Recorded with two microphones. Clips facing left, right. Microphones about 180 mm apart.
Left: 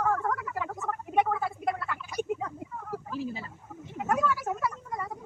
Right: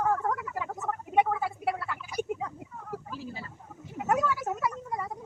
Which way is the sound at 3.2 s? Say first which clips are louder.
Left 6 dB; 20° left (ahead or behind).